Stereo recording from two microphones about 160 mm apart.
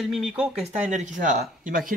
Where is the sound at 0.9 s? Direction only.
55° right (ahead or behind).